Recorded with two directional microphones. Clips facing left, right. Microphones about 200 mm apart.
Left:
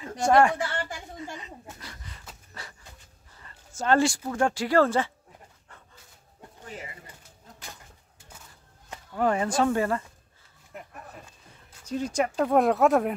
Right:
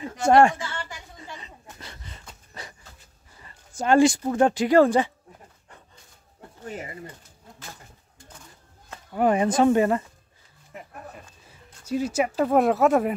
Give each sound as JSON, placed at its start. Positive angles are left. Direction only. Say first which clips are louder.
{"t": 0.3, "sound": "speech", "louder": "right 3 dB", "side_deg": -25}
{"t": 0.6, "sound": "a sound", "louder": "left 4 dB", "side_deg": 55}
{"t": 1.4, "sound": "a sound", "louder": "left 2 dB", "side_deg": -25}
{"t": 3.4, "sound": "speech", "louder": "right 2 dB", "side_deg": -15}
{"t": 9.1, "sound": "speech", "louder": "right 4 dB", "side_deg": -20}
{"t": 11.8, "sound": "speech", "louder": "right 3 dB", "side_deg": -10}